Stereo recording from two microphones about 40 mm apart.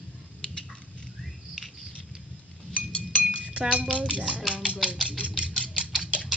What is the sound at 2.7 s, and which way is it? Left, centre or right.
Chink, left.